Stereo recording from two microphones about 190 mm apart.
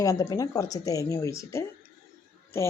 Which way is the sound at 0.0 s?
15° left (ahead or behind).